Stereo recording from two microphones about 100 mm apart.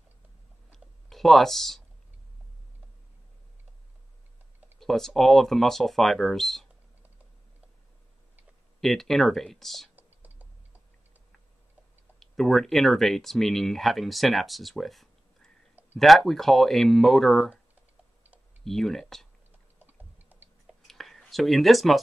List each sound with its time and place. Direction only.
0.7 s clicking: 5° left (ahead or behind)
4.7 s speech: 5° left (ahead or behind)
8.8 s speech: 5° left (ahead or behind)
9.9 s computer keyboard: 15° right (ahead or behind)
12.2 s speech: 5° left (ahead or behind)
18.6 s speech: 5° left (ahead or behind)
20.0 s chewing: 20° right (ahead or behind)
20.8 s whispering: centre (ahead or behind)